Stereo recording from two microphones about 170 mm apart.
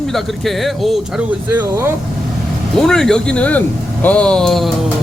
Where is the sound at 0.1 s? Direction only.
Centre (ahead or behind).